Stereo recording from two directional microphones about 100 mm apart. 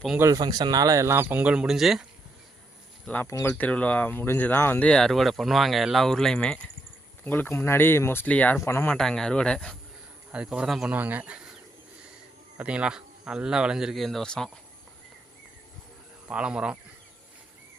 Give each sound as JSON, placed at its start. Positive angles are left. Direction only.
{"t": 0.3, "sound": "speech", "side_deg": -45}
{"t": 3.2, "sound": "speech", "side_deg": 30}
{"t": 3.6, "sound": "speech", "side_deg": 15}
{"t": 4.9, "sound": "speech", "side_deg": 5}
{"t": 7.3, "sound": "speech", "side_deg": 20}
{"t": 9.0, "sound": "speech", "side_deg": 5}
{"t": 10.3, "sound": "speech", "side_deg": -10}
{"t": 10.9, "sound": "speech", "side_deg": -15}
{"t": 12.5, "sound": "speech", "side_deg": -10}
{"t": 16.3, "sound": "speech", "side_deg": -10}